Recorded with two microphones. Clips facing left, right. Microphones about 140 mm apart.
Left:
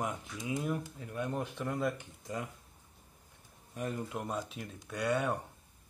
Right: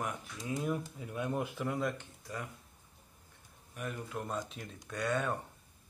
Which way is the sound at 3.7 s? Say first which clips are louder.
Left 4 dB; 30° left (ahead or behind).